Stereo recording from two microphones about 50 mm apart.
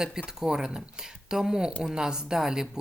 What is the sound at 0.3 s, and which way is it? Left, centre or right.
Speech, centre.